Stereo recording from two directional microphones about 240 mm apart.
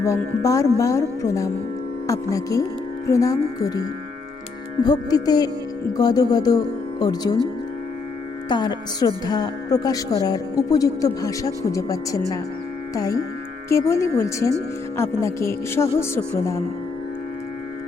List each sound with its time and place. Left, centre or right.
0.0 s a woman's voice: centre
4.8 s a woman's voice: centre
8.4 s a woman's voice: centre